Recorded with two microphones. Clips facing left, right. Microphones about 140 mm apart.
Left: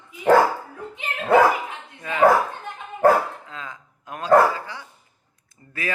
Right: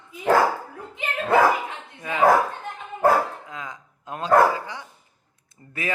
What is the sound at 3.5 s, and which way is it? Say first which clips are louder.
Dog: right 1 dB; 15° right (ahead or behind).